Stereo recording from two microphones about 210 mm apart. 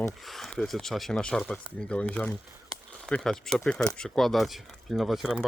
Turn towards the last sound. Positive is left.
turn(degrees=0)  # may be behind; listen again after turning